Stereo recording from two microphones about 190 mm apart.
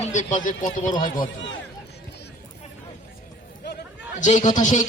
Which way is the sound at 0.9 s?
20° left (ahead or behind).